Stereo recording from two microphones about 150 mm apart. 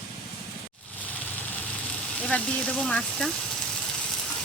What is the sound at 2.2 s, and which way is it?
Speech, 10° left (ahead or behind).